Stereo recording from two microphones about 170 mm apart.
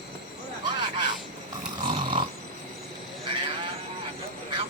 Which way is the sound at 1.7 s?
30° right (ahead or behind).